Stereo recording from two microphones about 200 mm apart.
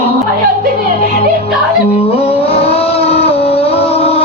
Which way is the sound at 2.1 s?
30° left (ahead or behind).